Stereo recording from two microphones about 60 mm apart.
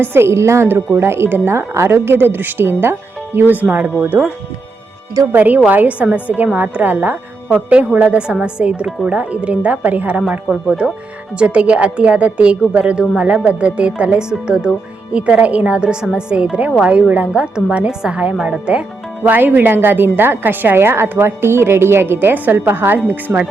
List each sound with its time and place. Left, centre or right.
0.0 s a woman's voice: right
5.3 s a woman's voice: right
7.4 s a woman's voice: centre
10.5 s a woman's voice: centre; by 23.4 s right